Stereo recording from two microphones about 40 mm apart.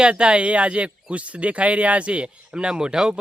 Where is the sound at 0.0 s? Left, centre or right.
Right.